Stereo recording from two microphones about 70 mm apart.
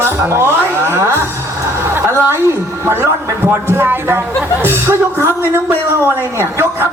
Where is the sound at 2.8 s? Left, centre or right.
Right.